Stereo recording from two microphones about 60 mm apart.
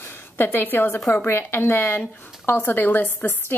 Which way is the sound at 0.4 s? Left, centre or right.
Left.